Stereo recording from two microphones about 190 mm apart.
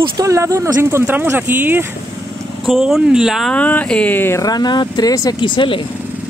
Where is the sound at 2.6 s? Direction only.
Centre (ahead or behind); by 5.9 s 25° left (ahead or behind).